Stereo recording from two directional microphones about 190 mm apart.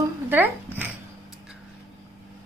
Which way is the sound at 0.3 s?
10° right (ahead or behind).